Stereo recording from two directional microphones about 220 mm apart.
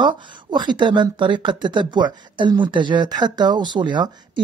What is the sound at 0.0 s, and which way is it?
Speech, 20° right (ahead or behind).